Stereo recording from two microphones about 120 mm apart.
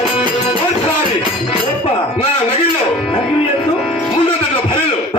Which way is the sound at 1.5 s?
50° left (ahead or behind).